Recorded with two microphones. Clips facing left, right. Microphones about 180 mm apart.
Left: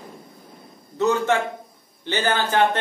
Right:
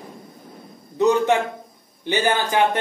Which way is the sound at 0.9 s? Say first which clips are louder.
Right 3 dB; 15° right (ahead or behind).